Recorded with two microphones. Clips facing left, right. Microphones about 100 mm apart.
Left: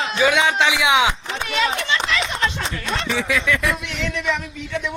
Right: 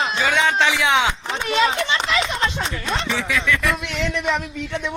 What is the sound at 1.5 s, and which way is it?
A man's voice, 30° right (ahead or behind).